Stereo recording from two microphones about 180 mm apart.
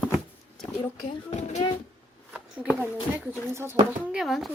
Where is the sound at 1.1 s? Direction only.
35° left (ahead or behind).